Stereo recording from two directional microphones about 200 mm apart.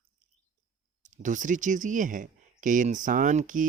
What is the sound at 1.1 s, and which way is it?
Speech, 40° right (ahead or behind).